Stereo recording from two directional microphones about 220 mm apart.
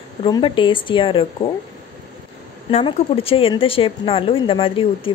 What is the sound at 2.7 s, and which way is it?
A woman's voice, 25° left (ahead or behind).